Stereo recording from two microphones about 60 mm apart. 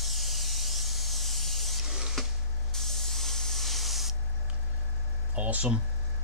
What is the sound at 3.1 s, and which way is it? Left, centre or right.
Spray, centre.